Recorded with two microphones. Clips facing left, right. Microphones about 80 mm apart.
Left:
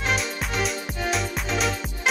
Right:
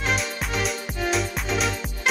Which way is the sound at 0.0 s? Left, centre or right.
Centre.